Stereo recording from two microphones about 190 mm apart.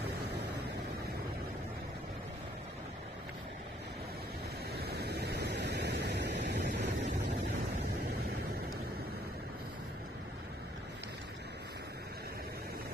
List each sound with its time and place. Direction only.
4.7 s vehicle: 60° right (ahead or behind)